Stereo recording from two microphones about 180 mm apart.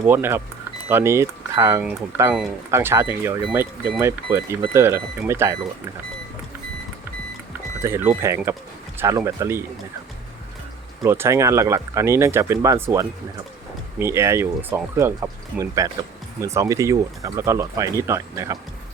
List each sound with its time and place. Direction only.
0.1 s speech: 10° right (ahead or behind)
7.8 s speech: 15° right (ahead or behind)
11.0 s speech: 15° right (ahead or behind)